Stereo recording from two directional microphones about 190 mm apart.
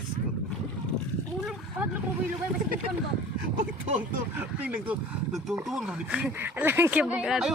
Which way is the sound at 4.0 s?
10° right (ahead or behind).